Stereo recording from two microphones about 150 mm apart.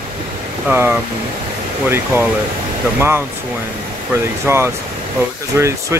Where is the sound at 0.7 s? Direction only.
15° right (ahead or behind).